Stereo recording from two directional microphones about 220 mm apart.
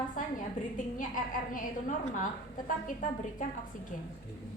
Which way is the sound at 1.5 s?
35° left (ahead or behind).